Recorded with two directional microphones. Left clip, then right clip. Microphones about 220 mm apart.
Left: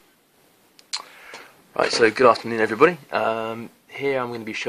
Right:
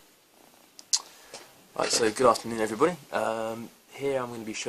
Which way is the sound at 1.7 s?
30° left (ahead or behind).